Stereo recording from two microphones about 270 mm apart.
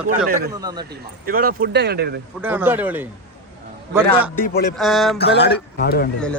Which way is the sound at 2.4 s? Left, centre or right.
Centre.